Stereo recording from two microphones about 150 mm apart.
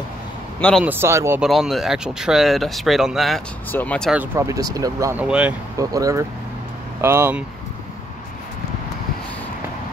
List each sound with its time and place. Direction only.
0.6 s speech: 5° left (ahead or behind)
0.8 s speech: 15° right (ahead or behind)
1.4 s speech: centre (ahead or behind)
4.1 s speech: 15° right (ahead or behind)
5.1 s speech: 10° right (ahead or behind)
5.8 s speech: 20° right (ahead or behind)